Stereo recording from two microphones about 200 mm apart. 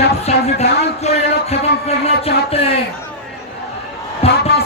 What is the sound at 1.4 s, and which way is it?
Speech, 30° left (ahead or behind).